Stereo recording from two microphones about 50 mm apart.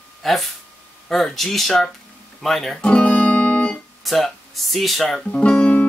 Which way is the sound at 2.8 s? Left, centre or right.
Left.